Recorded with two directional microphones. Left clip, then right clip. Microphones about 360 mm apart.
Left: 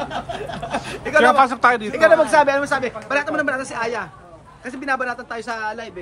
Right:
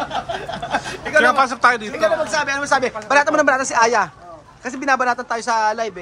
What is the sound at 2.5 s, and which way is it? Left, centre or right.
A man's voice, centre.